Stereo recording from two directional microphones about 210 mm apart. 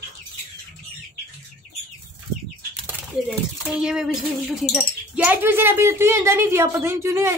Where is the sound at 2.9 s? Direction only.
5° right (ahead or behind).